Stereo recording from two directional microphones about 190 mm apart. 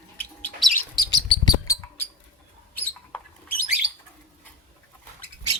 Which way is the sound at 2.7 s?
10° left (ahead or behind).